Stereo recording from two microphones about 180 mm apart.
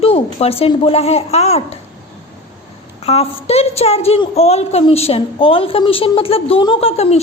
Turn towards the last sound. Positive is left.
turn(degrees=35)  # may be behind; listen again after turning